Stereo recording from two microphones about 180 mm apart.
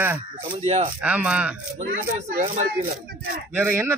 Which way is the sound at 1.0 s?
10° right (ahead or behind).